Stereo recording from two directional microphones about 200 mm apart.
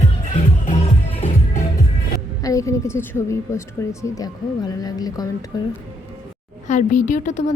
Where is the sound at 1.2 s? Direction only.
40° left (ahead or behind).